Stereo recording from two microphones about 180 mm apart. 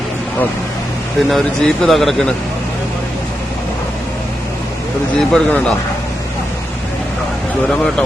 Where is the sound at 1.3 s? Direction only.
5° left (ahead or behind).